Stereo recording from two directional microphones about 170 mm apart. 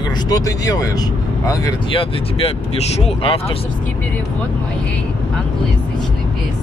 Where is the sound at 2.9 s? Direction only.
35° left (ahead or behind).